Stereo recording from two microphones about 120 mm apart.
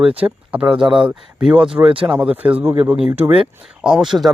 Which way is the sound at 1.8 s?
50° right (ahead or behind).